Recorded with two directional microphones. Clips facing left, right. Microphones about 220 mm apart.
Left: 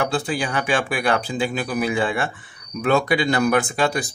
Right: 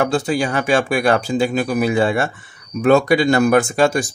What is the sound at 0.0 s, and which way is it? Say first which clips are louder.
Speech: right 5 dB; 45° right (ahead or behind).